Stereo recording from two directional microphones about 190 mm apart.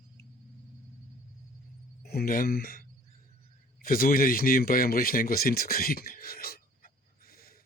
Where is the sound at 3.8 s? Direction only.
50° left (ahead or behind).